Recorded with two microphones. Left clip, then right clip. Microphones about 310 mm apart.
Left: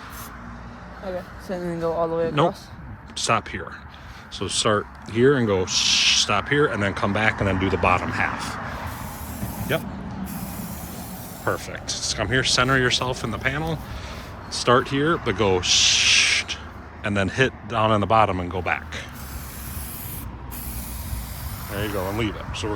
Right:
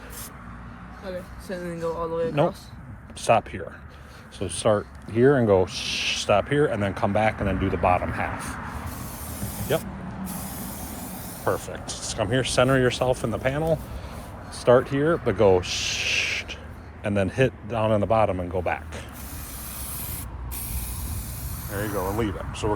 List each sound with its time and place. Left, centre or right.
1.5 s speech: left
3.2 s speech: centre
11.4 s speech: centre
21.7 s speech: centre